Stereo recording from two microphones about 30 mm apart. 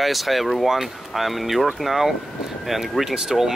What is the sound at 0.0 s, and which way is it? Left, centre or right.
Speech, centre.